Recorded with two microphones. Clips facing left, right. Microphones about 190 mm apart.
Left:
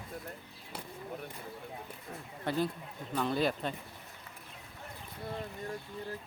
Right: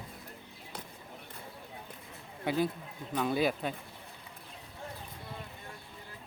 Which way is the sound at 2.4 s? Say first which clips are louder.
Right 2 dB; 10° right (ahead or behind).